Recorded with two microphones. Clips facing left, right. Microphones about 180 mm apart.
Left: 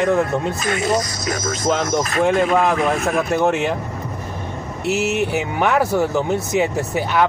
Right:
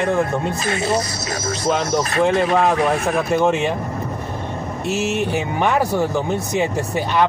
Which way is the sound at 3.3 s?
5° left (ahead or behind).